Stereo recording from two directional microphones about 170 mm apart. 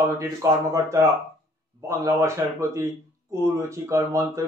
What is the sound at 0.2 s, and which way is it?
Speech, 20° right (ahead or behind).